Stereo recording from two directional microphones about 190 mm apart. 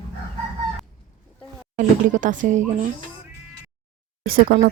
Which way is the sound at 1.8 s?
40° right (ahead or behind).